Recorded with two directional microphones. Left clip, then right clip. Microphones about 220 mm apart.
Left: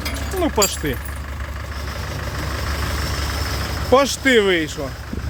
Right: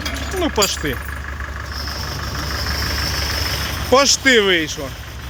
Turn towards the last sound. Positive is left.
turn(degrees=5)  # may be behind; listen again after turning